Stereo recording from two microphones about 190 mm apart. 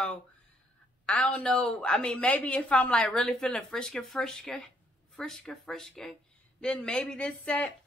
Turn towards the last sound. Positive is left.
turn(degrees=5)  # may be behind; listen again after turning